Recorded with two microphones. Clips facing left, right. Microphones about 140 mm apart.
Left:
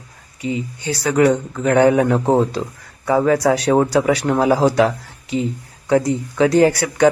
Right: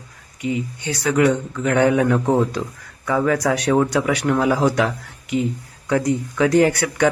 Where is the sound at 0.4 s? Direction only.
30° left (ahead or behind).